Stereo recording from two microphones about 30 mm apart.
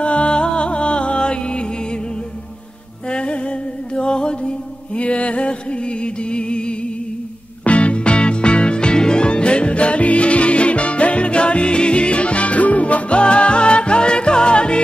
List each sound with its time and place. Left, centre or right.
0.0 s music: left
3.1 s mantra: left
7.6 s music: left
13.2 s music: left